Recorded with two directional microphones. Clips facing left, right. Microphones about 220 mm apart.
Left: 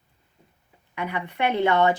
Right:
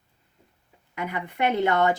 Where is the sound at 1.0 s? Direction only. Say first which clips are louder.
Left 1 dB; 45° right (ahead or behind).